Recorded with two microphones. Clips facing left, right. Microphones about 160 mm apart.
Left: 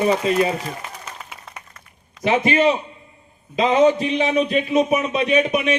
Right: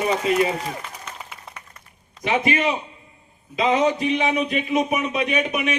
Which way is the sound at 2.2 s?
35° left (ahead or behind).